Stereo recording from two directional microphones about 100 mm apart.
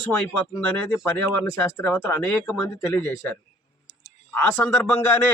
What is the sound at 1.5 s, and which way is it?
Speech, 20° left (ahead or behind).